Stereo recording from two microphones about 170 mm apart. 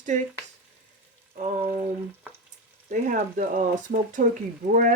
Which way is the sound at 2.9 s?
50° right (ahead or behind).